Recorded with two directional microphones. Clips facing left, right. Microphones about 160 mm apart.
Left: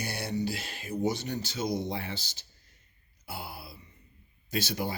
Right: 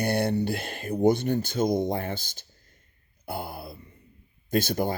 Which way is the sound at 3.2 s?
50° right (ahead or behind).